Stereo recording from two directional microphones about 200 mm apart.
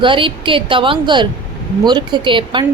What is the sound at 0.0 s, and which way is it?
Speech, 25° right (ahead or behind).